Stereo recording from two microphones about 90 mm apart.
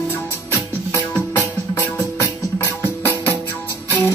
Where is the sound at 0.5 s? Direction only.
30° left (ahead or behind).